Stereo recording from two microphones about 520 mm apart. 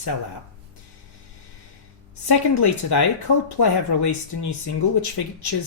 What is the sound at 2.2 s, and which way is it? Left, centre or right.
Speech, left.